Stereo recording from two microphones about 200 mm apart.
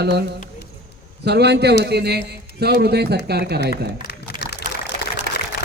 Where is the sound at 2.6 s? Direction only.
55° right (ahead or behind).